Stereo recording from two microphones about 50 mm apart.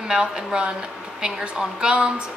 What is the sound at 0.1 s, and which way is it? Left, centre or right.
A woman's voice, centre.